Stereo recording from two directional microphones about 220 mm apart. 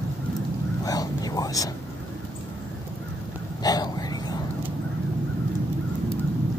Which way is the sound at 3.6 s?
15° left (ahead or behind).